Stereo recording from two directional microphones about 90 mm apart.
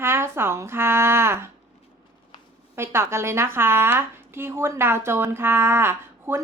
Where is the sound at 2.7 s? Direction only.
30° right (ahead or behind).